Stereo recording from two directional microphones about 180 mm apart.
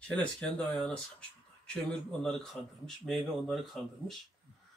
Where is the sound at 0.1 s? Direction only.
5° left (ahead or behind).